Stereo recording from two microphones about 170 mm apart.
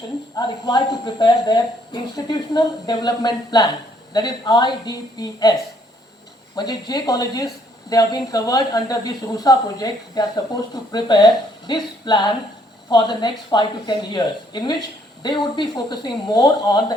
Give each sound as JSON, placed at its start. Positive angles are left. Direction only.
{"t": 0.3, "sound": "speech", "side_deg": 25}
{"t": 6.6, "sound": "speech", "side_deg": 25}